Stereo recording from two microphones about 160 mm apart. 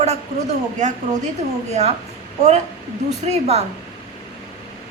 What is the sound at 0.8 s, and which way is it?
A woman's voice, 50° right (ahead or behind).